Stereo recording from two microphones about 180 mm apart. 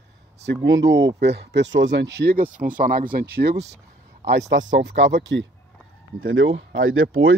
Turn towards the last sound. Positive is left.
turn(degrees=-90)